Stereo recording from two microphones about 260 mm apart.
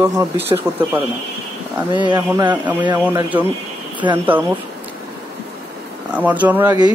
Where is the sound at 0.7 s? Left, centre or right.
Centre.